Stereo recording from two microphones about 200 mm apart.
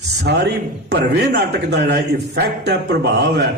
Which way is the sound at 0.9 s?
55° right (ahead or behind).